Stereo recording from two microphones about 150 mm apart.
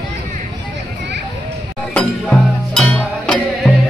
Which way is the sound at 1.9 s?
5° left (ahead or behind).